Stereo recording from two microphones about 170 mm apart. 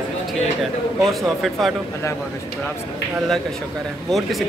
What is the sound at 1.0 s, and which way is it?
Speech, centre (ahead or behind).